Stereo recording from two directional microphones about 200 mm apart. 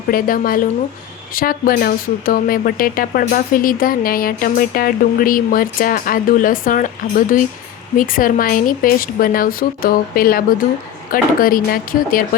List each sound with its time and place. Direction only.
0.1 s a woman's voice: 45° left (ahead or behind)